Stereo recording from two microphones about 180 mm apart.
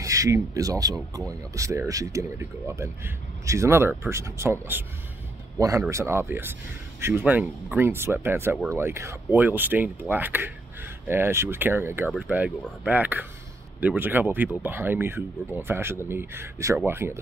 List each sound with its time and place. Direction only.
0.0 s speech: 20° right (ahead or behind)